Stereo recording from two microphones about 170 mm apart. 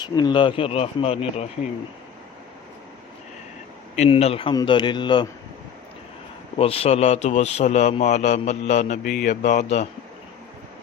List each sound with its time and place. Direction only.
0.0 s a man's voice: 25° left (ahead or behind)
3.9 s a man's voice: 40° left (ahead or behind)
6.6 s a man's voice: 35° left (ahead or behind)